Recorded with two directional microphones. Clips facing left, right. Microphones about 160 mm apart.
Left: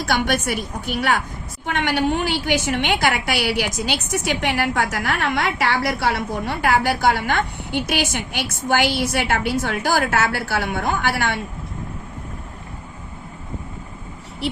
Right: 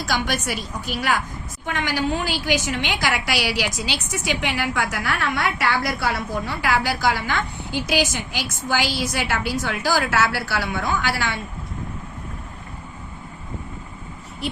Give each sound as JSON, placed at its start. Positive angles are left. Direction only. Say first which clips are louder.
{"t": 0.0, "sound": "a woman's voice", "louder": "left 4 dB", "side_deg": 60}